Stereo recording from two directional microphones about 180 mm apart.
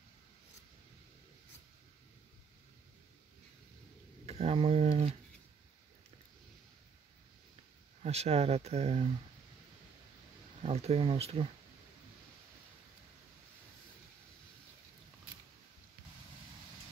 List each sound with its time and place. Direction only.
4.3 s speech: 35° right (ahead or behind)
8.0 s speech: 35° right (ahead or behind)
10.6 s speech: 35° right (ahead or behind)